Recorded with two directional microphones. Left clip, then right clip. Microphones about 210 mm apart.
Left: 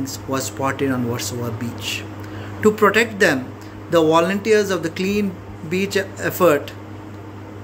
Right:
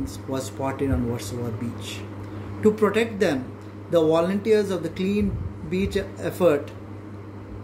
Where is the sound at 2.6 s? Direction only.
10° right (ahead or behind).